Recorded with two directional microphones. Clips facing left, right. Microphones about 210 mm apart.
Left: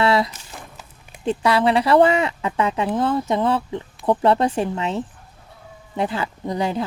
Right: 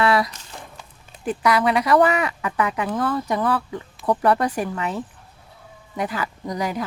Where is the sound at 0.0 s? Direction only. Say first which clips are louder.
Left 1 dB; 25° left (ahead or behind).